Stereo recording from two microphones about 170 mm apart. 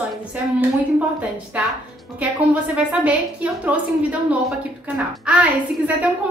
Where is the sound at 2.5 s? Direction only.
10° right (ahead or behind).